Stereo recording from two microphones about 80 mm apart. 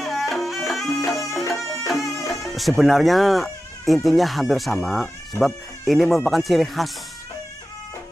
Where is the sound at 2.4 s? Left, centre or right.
Centre.